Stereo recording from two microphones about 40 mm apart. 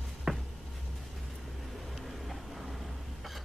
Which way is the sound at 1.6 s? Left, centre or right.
Centre.